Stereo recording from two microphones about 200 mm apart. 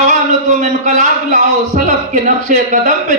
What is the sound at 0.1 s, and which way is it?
A man's voice, 35° right (ahead or behind).